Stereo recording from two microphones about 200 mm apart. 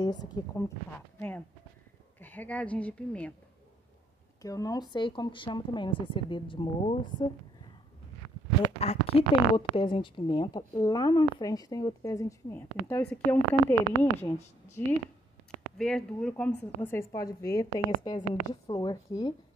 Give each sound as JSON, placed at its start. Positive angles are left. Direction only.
{"t": 0.0, "sound": "a woman's voice", "side_deg": 20}
{"t": 2.1, "sound": "speech", "side_deg": 10}
{"t": 4.4, "sound": "a woman's voice", "side_deg": 15}
{"t": 8.7, "sound": "a woman's voice", "side_deg": 30}
{"t": 14.8, "sound": "speech", "side_deg": 10}